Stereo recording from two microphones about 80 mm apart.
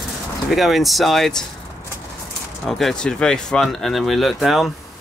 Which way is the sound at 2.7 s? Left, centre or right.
Centre.